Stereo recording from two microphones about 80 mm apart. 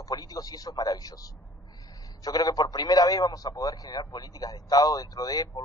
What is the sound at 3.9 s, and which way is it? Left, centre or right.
Speech, left.